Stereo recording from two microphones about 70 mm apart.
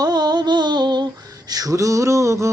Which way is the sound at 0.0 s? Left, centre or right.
Right.